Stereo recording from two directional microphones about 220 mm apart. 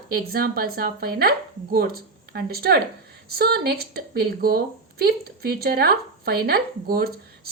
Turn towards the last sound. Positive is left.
turn(degrees=-45)  # may be behind; listen again after turning